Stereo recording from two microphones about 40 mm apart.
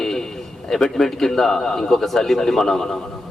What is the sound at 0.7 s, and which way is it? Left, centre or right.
A man's voice, centre.